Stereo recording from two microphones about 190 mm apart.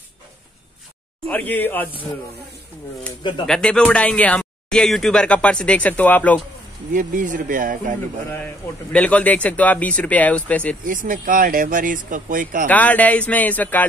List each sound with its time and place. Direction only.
1.2 s a man's voice: 10° left (ahead or behind)
3.4 s speech: 5° left (ahead or behind)
6.9 s speech: 45° right (ahead or behind)
8.9 s a man's voice: 5° left (ahead or behind)
10.8 s speech: 45° right (ahead or behind)
12.6 s a man's voice: 10° left (ahead or behind)